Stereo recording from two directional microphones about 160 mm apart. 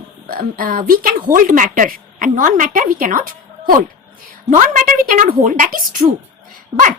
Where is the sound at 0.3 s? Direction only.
65° right (ahead or behind).